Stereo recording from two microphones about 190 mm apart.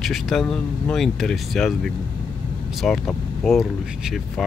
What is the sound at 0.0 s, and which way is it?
Speech, centre (ahead or behind).